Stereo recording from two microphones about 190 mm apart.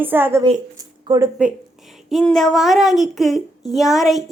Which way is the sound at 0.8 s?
20° right (ahead or behind).